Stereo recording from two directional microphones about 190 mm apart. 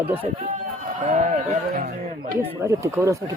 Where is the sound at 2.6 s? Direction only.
15° right (ahead or behind).